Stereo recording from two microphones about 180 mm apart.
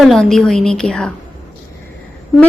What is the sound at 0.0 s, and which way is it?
Speech, centre (ahead or behind).